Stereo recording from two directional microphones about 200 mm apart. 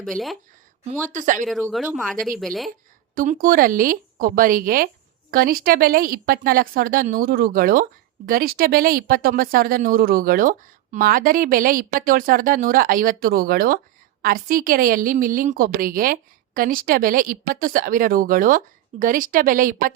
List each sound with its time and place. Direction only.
0.0 s speech: centre (ahead or behind)
1.1 s speech: 40° right (ahead or behind)
1.7 s speech: centre (ahead or behind)
3.2 s speech: 45° right (ahead or behind)